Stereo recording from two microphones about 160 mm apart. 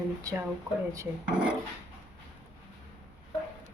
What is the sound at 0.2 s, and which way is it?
Speech, 20° right (ahead or behind).